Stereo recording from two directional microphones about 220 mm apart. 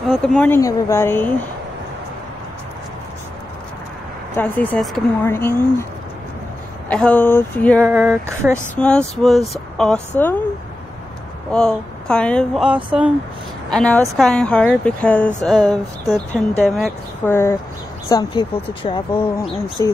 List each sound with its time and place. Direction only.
0.1 s speech: 5° left (ahead or behind)
4.4 s speech: 5° left (ahead or behind)
6.9 s speech: 5° left (ahead or behind)
7.8 s speech: 10° right (ahead or behind)
8.7 s speech: 5° left (ahead or behind)
11.5 s speech: 5° left (ahead or behind)
17.3 s speech: 10° left (ahead or behind)